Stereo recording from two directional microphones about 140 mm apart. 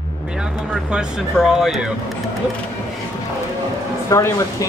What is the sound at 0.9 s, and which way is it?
Speech, 5° right (ahead or behind).